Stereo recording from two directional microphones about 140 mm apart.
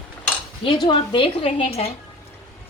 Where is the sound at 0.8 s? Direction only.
35° left (ahead or behind).